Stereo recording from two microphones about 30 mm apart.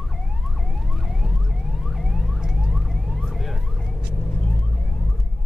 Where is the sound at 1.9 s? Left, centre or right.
Centre.